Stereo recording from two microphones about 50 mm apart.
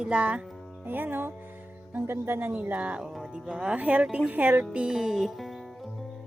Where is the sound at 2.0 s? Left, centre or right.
Right.